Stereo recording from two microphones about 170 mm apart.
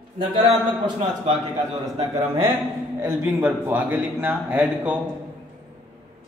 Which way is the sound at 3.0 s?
15° right (ahead or behind).